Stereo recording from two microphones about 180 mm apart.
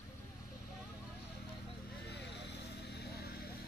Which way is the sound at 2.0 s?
70° left (ahead or behind).